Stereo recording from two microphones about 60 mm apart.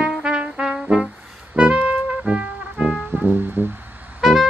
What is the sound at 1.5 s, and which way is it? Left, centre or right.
Music, centre.